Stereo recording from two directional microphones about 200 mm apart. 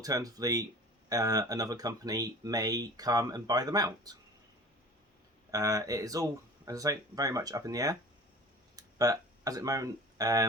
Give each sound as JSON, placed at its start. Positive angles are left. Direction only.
{"t": 0.0, "sound": "speech", "side_deg": -20}
{"t": 5.5, "sound": "speech", "side_deg": -15}
{"t": 8.7, "sound": "a sound", "side_deg": -15}